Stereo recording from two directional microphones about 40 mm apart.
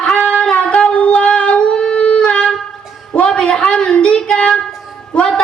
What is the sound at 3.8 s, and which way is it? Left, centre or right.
Child singing, left.